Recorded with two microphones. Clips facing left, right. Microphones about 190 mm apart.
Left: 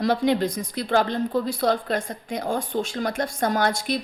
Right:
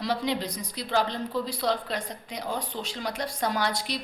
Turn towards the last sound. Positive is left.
turn(degrees=50)  # may be behind; listen again after turning